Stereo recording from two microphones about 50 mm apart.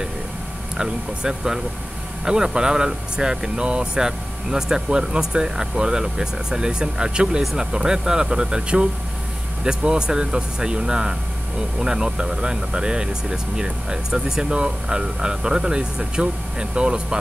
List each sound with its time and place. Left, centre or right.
0.7 s speech: centre